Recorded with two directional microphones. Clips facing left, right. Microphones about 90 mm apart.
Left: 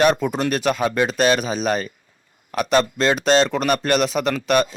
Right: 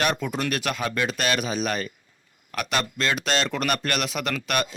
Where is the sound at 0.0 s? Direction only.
30° left (ahead or behind).